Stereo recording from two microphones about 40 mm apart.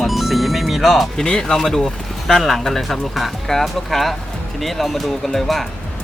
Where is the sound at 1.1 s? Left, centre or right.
Centre.